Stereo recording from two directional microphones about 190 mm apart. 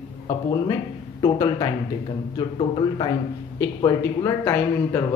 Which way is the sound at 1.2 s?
20° left (ahead or behind).